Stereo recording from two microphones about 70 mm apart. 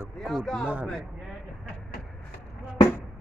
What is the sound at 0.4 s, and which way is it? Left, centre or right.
Speech, centre.